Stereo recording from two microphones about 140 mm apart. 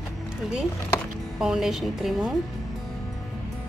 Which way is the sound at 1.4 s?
5° right (ahead or behind).